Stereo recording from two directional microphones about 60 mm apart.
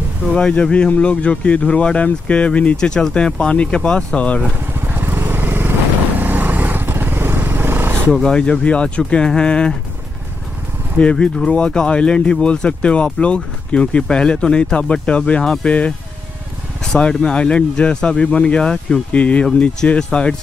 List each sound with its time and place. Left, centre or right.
0.3 s speech: centre
4.8 s vehicle: right
8.1 s speech: centre
11.0 s speech: centre